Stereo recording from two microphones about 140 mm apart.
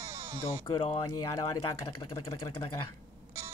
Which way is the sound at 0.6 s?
35° left (ahead or behind).